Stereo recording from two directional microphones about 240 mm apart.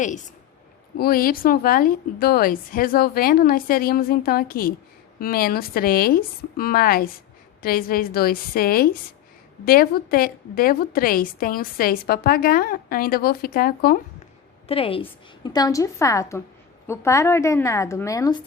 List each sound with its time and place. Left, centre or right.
0.9 s a woman's voice: left
14.7 s a woman's voice: left